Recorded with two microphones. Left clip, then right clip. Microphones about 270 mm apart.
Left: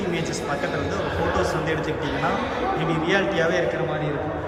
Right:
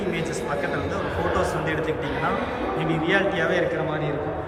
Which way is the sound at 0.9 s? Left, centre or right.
Centre.